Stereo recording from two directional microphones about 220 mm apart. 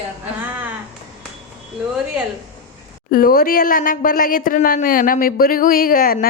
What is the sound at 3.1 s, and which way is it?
Speech, 40° left (ahead or behind).